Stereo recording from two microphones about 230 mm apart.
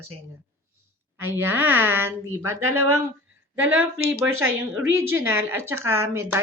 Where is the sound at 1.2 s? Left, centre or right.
Centre.